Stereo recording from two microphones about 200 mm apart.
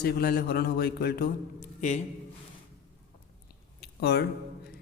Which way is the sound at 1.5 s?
35° left (ahead or behind).